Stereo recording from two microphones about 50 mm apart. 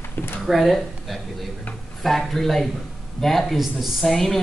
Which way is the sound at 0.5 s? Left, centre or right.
Centre.